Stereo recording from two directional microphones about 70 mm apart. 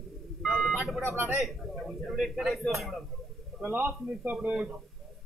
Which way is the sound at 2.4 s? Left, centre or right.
Centre.